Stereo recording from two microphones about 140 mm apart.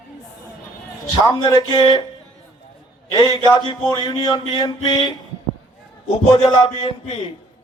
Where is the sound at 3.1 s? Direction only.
30° left (ahead or behind).